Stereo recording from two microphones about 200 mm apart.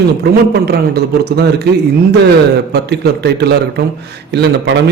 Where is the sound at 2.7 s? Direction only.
55° right (ahead or behind).